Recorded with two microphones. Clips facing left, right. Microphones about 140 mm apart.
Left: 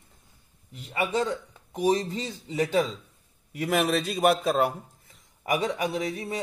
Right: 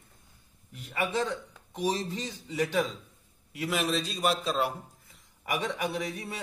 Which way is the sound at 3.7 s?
55° left (ahead or behind).